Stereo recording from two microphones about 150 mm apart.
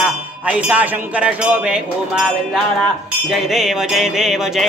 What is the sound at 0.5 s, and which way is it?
Speech, 10° right (ahead or behind).